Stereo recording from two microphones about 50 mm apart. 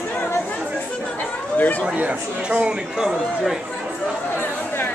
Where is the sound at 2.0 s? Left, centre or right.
Right.